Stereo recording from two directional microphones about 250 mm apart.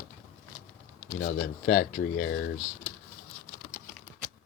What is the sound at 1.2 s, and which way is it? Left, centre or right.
Speech, left.